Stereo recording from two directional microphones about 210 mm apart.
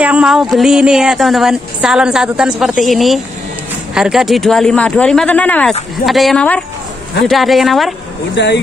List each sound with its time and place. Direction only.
0.0 s a woman's voice: 5° right (ahead or behind)
8.4 s speech: 55° left (ahead or behind)